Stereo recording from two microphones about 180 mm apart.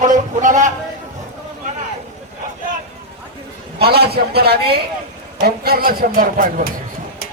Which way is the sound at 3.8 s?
60° right (ahead or behind).